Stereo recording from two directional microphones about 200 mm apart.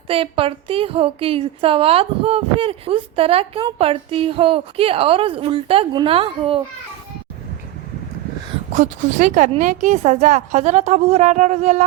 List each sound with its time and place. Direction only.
0.1 s a woman's voice: 30° right (ahead or behind)
8.7 s a woman's voice: 35° right (ahead or behind)